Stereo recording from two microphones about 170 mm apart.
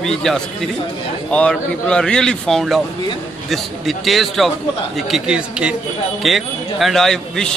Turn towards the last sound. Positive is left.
turn(degrees=0)  # may be behind; listen again after turning